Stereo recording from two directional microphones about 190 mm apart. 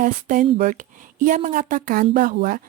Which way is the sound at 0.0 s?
45° right (ahead or behind).